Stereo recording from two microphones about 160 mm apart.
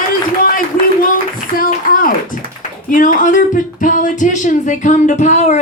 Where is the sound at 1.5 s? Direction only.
60° left (ahead or behind).